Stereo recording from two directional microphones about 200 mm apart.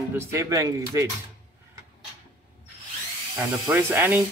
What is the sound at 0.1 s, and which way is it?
Music, 15° right (ahead or behind).